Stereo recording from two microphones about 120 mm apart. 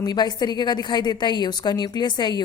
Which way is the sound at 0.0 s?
35° left (ahead or behind).